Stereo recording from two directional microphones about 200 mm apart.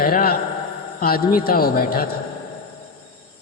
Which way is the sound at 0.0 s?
45° left (ahead or behind).